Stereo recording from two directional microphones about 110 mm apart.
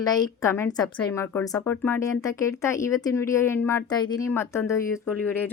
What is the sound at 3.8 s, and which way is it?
Speech, 35° left (ahead or behind).